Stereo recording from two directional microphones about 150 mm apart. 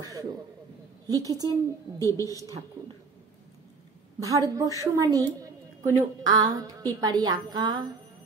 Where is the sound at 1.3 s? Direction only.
25° right (ahead or behind).